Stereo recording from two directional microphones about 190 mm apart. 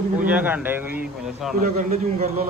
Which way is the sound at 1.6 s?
40° right (ahead or behind).